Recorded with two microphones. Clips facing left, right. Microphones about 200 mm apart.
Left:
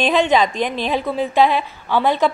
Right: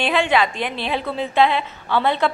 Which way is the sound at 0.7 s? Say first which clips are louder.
Left 4 dB; 15° left (ahead or behind).